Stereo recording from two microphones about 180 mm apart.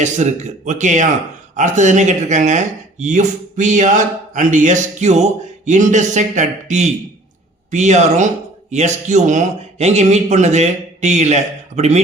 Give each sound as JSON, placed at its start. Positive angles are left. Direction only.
{"t": 0.0, "sound": "a man's voice", "side_deg": -40}